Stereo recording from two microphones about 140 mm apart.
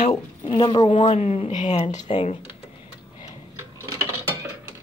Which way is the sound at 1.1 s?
50° left (ahead or behind).